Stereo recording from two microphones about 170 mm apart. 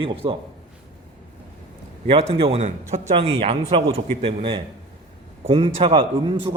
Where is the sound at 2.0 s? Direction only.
30° right (ahead or behind).